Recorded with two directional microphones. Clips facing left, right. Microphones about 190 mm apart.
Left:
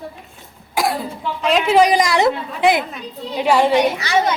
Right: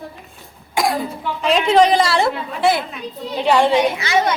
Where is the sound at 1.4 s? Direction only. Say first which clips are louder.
Even; centre (ahead or behind).